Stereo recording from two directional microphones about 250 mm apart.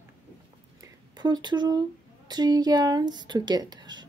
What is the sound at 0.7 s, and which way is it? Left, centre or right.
Speech, centre.